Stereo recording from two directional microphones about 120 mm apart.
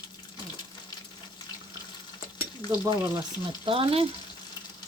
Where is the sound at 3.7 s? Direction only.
50° right (ahead or behind).